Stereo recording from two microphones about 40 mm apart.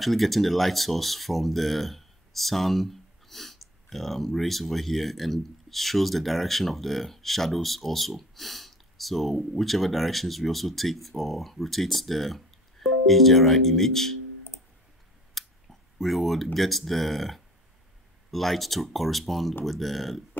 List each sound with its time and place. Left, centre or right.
0.0 s speech: centre
15.4 s scissors: centre
16.0 s speech: centre